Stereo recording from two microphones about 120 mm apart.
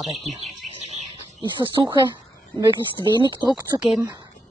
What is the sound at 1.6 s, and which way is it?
A woman's voice, 35° right (ahead or behind).